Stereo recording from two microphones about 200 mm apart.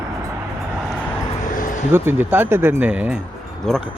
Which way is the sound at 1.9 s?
10° right (ahead or behind).